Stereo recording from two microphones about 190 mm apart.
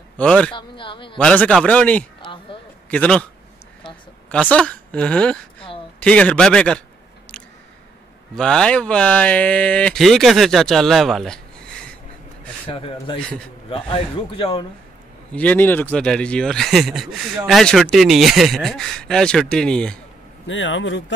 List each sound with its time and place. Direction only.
0.2 s speech: 5° left (ahead or behind)
0.6 s speech: 25° left (ahead or behind)
1.1 s a man's voice: 5° left (ahead or behind)
2.2 s a sound: 25° left (ahead or behind)
2.9 s a man's voice: 5° left (ahead or behind)
4.3 s speech: 5° left (ahead or behind)
8.4 s speech: 5° left (ahead or behind)
12.6 s a man's voice: 30° left (ahead or behind)
15.3 s speech: 10° left (ahead or behind)
20.4 s speech: 80° left